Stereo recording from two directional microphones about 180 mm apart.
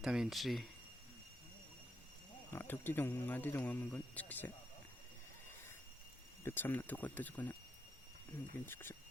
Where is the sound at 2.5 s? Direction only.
10° left (ahead or behind).